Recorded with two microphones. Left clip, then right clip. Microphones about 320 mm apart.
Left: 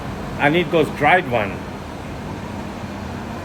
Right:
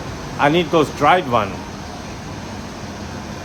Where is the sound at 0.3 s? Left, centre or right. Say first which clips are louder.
Right 2 dB; centre.